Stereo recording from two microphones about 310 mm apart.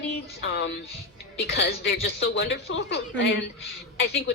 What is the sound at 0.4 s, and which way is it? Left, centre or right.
A man's voice, left.